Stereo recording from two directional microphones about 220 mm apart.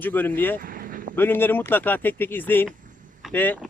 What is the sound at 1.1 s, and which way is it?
Speech, 10° left (ahead or behind).